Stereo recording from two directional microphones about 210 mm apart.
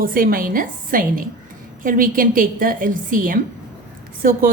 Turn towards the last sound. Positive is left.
turn(degrees=-40)  # may be behind; listen again after turning